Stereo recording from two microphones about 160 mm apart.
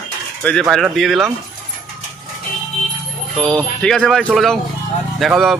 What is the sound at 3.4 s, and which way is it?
Speech, 5° left (ahead or behind).